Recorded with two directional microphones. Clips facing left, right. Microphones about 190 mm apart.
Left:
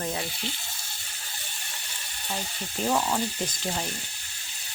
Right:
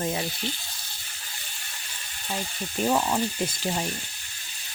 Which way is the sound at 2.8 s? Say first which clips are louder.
Right 2 dB; 10° right (ahead or behind).